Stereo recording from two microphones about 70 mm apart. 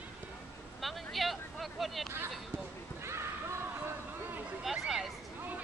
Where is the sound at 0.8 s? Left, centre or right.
Centre.